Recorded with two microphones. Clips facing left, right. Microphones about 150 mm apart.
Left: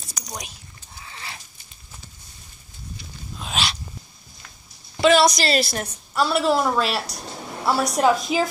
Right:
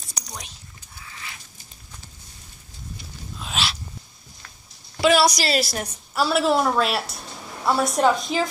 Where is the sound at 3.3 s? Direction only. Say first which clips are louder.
Left 1 dB; centre (ahead or behind).